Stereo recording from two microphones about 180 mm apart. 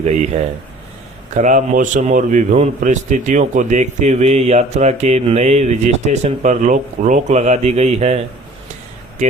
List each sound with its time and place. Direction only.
0.0 s a man's voice: 40° right (ahead or behind)
1.3 s a man's voice: 45° right (ahead or behind)